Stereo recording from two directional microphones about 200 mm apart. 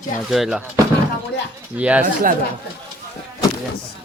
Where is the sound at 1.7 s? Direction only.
5° right (ahead or behind).